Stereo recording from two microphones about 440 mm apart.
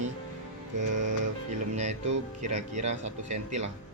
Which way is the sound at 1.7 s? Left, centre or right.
Centre.